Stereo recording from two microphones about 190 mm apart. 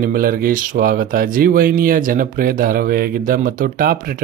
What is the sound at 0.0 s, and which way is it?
Speech, 50° right (ahead or behind).